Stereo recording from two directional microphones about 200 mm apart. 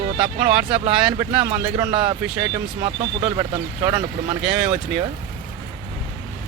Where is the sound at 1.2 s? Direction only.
20° right (ahead or behind).